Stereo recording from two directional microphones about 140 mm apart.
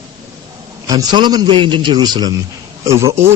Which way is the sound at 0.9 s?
30° right (ahead or behind).